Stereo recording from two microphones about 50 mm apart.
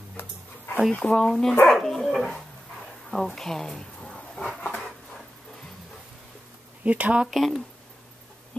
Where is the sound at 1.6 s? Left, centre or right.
Centre.